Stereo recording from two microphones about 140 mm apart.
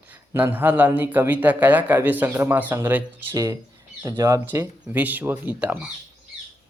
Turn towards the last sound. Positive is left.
turn(degrees=-10)  # may be behind; listen again after turning